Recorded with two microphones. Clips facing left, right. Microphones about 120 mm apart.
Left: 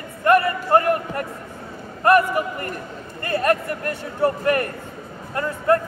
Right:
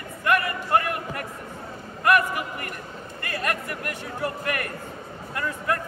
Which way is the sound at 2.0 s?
35° left (ahead or behind).